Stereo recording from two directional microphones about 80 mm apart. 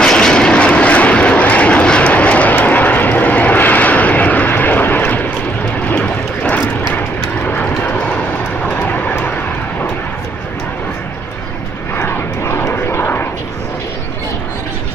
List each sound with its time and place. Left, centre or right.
0.0 s vehicle: centre
11.9 s vehicle: left